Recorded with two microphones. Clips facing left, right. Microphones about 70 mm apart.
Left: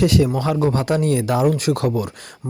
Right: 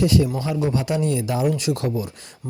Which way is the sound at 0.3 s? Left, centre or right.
Left.